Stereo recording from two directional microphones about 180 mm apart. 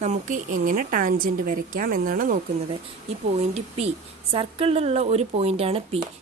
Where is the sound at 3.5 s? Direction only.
35° right (ahead or behind).